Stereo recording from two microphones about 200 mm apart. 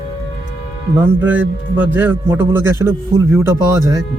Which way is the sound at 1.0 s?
10° right (ahead or behind).